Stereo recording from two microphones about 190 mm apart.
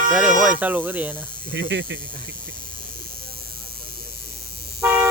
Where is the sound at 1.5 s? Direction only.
75° right (ahead or behind).